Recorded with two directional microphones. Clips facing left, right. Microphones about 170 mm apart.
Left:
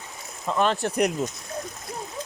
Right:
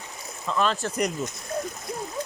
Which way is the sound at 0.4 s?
20° left (ahead or behind).